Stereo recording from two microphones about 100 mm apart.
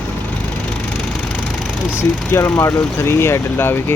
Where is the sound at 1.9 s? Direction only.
25° left (ahead or behind).